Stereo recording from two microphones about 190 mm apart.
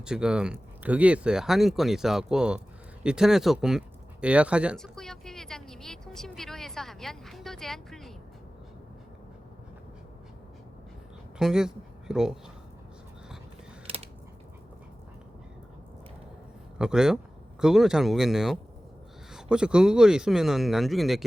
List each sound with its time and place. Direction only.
0.0 s speech: 5° right (ahead or behind)
3.0 s a sound: 5° right (ahead or behind)
11.3 s speech: 5° right (ahead or behind)
13.8 s typing: 30° right (ahead or behind)
16.7 s speech: 5° right (ahead or behind)